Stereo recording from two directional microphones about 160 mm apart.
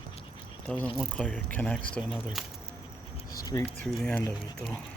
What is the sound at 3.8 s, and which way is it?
Speech, 10° left (ahead or behind).